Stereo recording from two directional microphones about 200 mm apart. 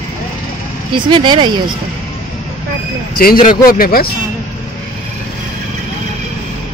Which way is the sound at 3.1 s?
45° left (ahead or behind).